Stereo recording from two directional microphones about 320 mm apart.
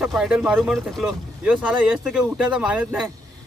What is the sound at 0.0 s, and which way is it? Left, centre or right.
Speech, centre.